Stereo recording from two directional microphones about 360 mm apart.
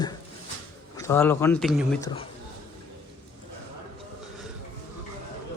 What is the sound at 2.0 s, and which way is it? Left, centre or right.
Speech, centre.